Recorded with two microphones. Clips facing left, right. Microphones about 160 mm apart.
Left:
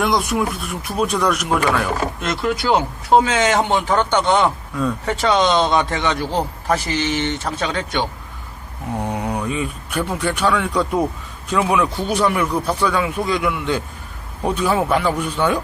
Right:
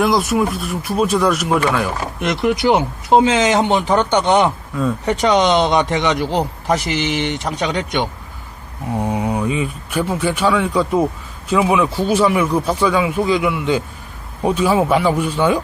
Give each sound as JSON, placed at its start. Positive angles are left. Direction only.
{"t": 0.0, "sound": "speech", "side_deg": 0}
{"t": 2.2, "sound": "speech", "side_deg": -20}
{"t": 4.7, "sound": "speech", "side_deg": -5}
{"t": 5.0, "sound": "speech", "side_deg": -20}